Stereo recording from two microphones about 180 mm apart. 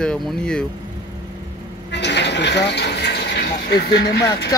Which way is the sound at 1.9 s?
70° left (ahead or behind).